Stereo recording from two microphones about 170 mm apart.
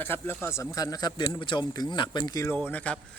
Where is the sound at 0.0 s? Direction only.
10° left (ahead or behind).